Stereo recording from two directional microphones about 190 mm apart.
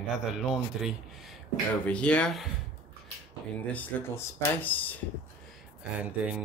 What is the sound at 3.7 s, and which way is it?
Speech, 10° left (ahead or behind).